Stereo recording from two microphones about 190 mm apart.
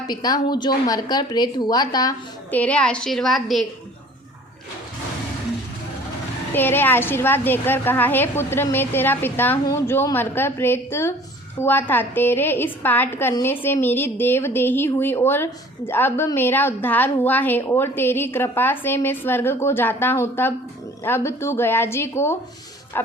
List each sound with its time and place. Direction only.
0.1 s a woman's voice: 20° left (ahead or behind)
2.6 s a woman's voice: 5° left (ahead or behind)
6.5 s a woman's voice: 10° left (ahead or behind)